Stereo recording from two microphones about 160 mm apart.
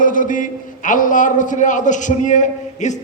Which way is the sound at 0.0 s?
55° left (ahead or behind).